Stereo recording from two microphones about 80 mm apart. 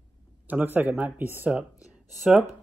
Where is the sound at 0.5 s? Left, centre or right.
Right.